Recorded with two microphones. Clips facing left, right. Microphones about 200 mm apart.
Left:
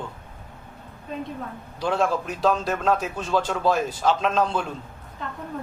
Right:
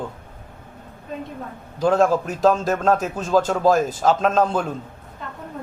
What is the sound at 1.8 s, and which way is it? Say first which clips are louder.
A man's voice: right 6 dB; 45° right (ahead or behind).